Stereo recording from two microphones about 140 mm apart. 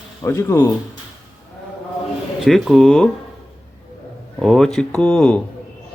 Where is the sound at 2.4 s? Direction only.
Centre (ahead or behind).